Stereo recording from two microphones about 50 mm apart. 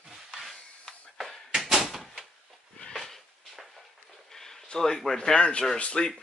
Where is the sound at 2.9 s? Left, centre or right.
Centre.